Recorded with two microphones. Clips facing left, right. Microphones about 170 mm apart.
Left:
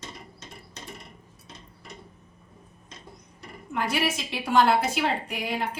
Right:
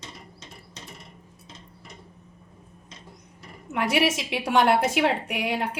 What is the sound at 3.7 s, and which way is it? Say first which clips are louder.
A woman's voice: right 4 dB; 75° right (ahead or behind).